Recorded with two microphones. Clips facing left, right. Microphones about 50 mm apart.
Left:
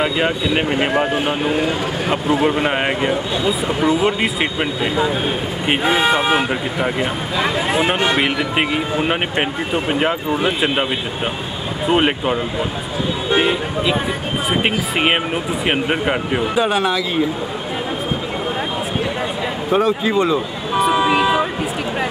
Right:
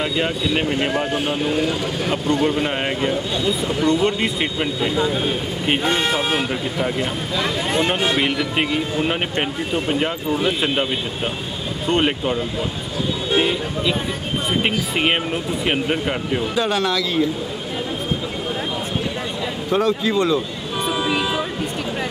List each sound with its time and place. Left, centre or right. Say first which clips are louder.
0.0 s speech: left 3 dB; centre
2.5 s speech: left 3 dB; left
4.6 s speech: left 2 dB; centre
11.9 s speech: left 3 dB; centre
19.7 s speech: left 2 dB; centre
20.9 s vehicle: left 5 dB; centre